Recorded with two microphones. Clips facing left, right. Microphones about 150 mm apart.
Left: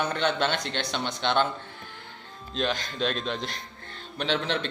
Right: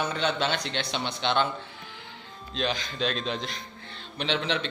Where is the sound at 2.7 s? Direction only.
50° left (ahead or behind).